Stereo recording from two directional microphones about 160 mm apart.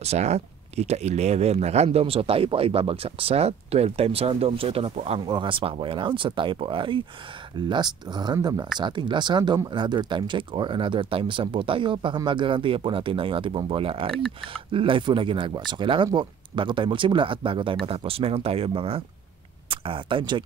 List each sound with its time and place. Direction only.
0.0 s speech: 40° right (ahead or behind)
5.2 s speech: 30° right (ahead or behind)